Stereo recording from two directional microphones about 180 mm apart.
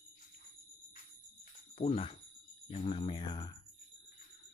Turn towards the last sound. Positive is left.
turn(degrees=20)  # may be behind; listen again after turning